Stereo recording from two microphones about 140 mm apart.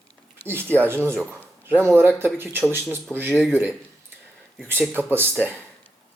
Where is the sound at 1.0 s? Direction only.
10° left (ahead or behind).